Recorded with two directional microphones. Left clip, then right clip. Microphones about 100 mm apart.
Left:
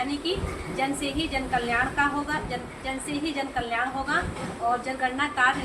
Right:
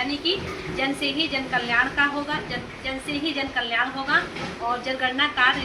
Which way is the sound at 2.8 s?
25° left (ahead or behind).